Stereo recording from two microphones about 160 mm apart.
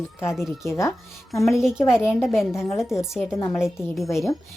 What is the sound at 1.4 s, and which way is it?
Speech, 5° right (ahead or behind).